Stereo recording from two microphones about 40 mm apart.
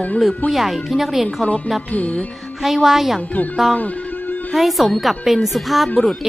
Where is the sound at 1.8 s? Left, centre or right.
Left.